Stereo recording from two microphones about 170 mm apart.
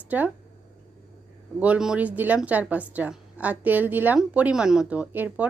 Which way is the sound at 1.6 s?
5° right (ahead or behind).